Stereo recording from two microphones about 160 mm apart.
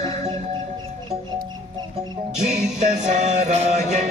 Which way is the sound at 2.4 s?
5° right (ahead or behind).